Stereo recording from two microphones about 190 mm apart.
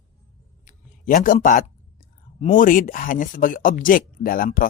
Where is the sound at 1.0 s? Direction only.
45° left (ahead or behind).